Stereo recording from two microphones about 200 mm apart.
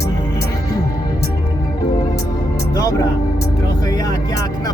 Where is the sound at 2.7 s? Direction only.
15° left (ahead or behind).